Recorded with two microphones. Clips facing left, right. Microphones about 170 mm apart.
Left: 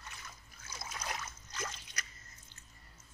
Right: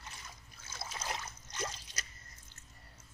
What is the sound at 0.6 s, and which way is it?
Trickle, 30° right (ahead or behind).